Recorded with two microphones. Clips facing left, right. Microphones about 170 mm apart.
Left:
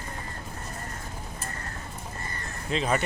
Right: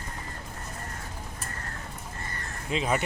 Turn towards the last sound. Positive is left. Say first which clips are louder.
# left 1 dB
turn(degrees=-10)  # may be behind; listen again after turning